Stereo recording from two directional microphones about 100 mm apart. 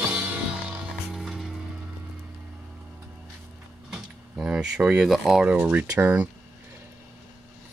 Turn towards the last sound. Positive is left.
turn(degrees=-15)  # may be behind; listen again after turning